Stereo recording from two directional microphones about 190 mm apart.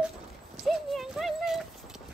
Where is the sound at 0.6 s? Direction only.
Centre (ahead or behind).